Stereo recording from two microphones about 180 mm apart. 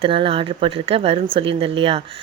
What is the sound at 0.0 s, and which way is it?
Speech, 30° right (ahead or behind).